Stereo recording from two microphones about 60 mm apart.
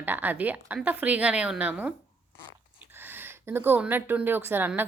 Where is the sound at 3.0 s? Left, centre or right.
Right.